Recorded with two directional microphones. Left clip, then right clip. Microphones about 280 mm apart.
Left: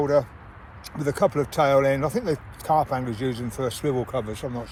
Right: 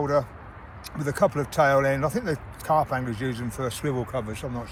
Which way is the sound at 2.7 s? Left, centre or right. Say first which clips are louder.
Left 1 dB; left.